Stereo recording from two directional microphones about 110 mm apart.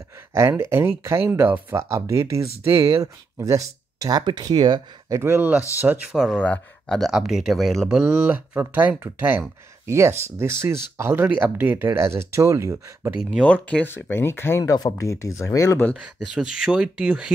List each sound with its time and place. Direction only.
0.3 s speech: 25° right (ahead or behind); by 5.2 s 40° right (ahead or behind)
5.2 s speech: 20° right (ahead or behind)
6.3 s speech: 10° left (ahead or behind)
7.0 s speech: 5° right (ahead or behind); by 13.1 s 25° right (ahead or behind)
13.4 s speech: 10° left (ahead or behind)
14.6 s speech: 35° left (ahead or behind)
16.3 s speech: 5° right (ahead or behind)